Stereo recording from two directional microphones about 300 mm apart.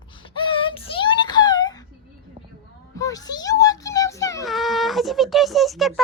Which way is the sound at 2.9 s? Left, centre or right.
Centre.